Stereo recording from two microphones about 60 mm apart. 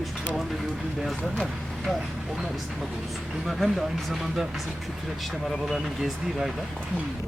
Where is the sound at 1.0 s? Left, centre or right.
Centre.